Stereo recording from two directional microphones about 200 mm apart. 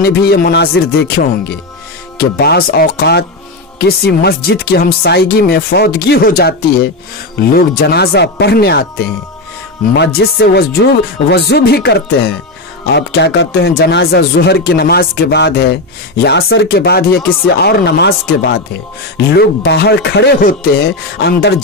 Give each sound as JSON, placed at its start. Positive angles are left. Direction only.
{"t": 0.0, "sound": "speech", "side_deg": 50}